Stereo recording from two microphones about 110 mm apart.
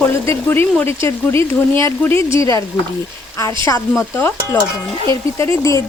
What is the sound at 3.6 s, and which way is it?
Speech, 25° left (ahead or behind).